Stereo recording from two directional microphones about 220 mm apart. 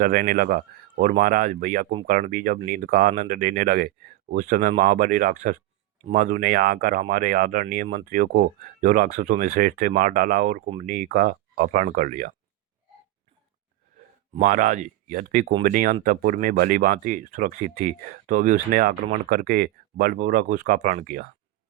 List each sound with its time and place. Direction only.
0.0 s speech: 40° right (ahead or behind)
14.3 s speech: 35° right (ahead or behind)